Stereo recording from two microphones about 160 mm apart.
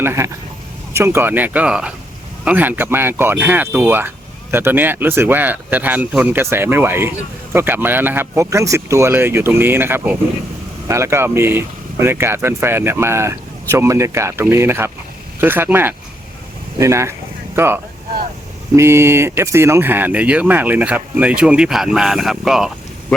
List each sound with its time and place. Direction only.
0.0 s speech: 15° right (ahead or behind)
18.8 s speech: 15° right (ahead or behind)